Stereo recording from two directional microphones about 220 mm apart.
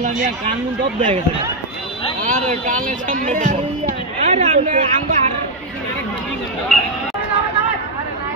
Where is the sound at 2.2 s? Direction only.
35° right (ahead or behind).